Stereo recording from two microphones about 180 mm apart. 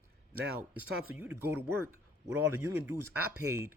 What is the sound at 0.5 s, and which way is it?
Speech, 10° right (ahead or behind).